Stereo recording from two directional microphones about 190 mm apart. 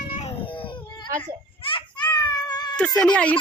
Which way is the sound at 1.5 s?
25° left (ahead or behind).